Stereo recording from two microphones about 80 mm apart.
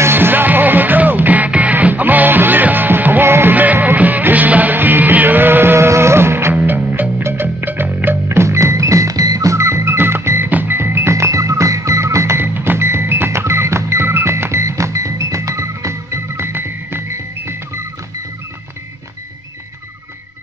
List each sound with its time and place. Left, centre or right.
0.0 s music: right
6.5 s music: right